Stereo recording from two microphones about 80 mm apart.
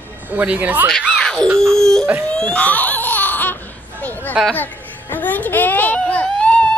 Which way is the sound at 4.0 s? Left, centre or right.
Left.